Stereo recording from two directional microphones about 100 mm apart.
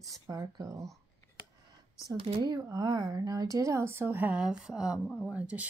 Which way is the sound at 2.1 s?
65° right (ahead or behind).